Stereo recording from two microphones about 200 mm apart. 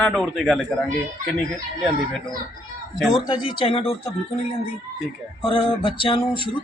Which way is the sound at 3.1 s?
20° left (ahead or behind).